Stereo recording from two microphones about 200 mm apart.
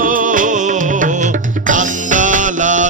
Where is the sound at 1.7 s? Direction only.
40° right (ahead or behind).